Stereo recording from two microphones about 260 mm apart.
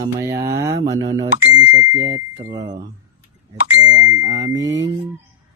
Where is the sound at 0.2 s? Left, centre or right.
Right.